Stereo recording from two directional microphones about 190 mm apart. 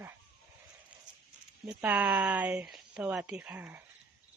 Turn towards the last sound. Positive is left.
turn(degrees=-5)  # may be behind; listen again after turning